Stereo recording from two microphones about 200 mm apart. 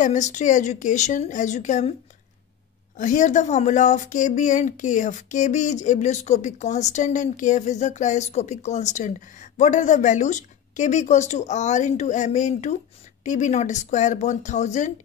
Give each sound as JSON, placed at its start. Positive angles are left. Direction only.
{"t": 0.0, "sound": "speech", "side_deg": 35}
{"t": 3.0, "sound": "speech", "side_deg": 40}